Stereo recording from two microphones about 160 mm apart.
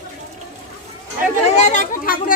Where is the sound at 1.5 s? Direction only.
50° left (ahead or behind).